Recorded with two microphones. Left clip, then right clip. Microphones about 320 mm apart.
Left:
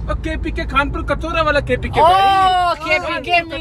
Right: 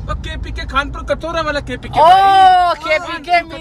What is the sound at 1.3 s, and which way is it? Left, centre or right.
Speech, right.